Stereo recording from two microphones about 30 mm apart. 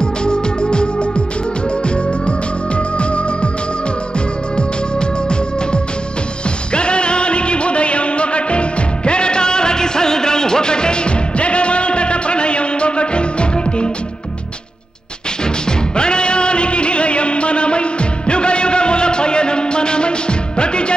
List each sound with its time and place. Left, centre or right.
0.0 s music: left
3.0 s music: left
6.7 s music: left
16.0 s music: left